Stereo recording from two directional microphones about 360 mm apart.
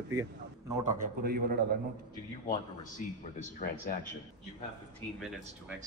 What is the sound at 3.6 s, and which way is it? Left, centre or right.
Speech, left.